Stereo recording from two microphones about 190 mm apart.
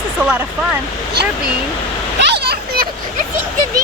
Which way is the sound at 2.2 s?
60° right (ahead or behind).